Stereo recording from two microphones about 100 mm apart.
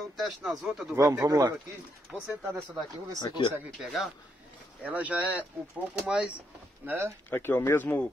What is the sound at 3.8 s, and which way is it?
Speech, centre (ahead or behind).